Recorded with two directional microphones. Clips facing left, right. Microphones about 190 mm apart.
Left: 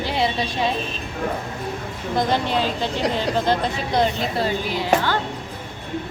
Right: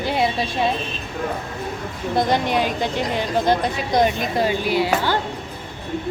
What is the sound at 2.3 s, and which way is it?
Speech, 15° right (ahead or behind).